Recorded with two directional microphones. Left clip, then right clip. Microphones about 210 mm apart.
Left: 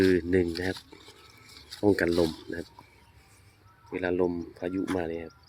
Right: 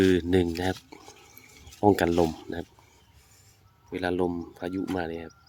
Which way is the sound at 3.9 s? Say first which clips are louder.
Even; 20° right (ahead or behind).